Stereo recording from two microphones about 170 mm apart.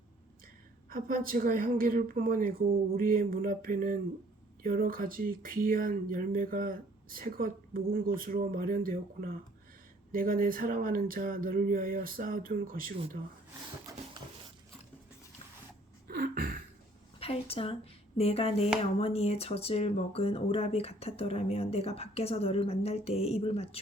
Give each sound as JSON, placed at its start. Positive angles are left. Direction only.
{"t": 0.9, "sound": "speech", "side_deg": -55}
{"t": 16.0, "sound": "a sound", "side_deg": -55}
{"t": 17.2, "sound": "a woman's voice", "side_deg": 35}